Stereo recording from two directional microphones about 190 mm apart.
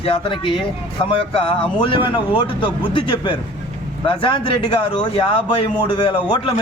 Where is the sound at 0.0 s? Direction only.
30° left (ahead or behind).